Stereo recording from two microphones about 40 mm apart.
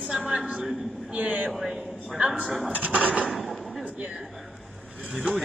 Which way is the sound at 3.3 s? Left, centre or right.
Centre.